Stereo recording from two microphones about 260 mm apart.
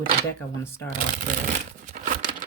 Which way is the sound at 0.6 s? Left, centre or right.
Centre.